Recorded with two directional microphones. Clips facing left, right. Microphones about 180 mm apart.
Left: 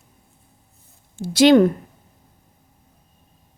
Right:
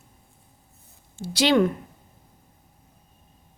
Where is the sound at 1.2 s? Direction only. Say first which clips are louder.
Left 7 dB; 50° left (ahead or behind).